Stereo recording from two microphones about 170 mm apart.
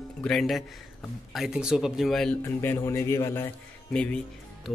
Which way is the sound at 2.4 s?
15° left (ahead or behind).